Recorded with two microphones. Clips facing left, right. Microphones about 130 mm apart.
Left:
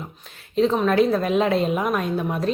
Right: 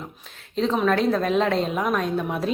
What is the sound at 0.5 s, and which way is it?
A woman's voice, centre (ahead or behind).